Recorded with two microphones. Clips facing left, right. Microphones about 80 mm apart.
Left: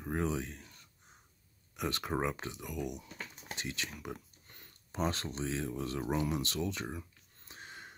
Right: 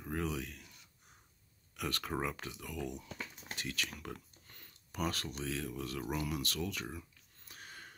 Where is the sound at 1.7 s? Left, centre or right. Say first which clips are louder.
Left 3 dB; left.